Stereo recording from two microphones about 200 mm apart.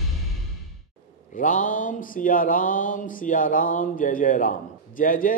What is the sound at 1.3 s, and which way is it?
A man's voice, 40° left (ahead or behind).